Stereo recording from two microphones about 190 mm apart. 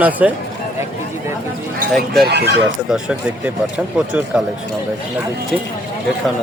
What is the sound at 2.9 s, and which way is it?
A man's voice, 10° right (ahead or behind).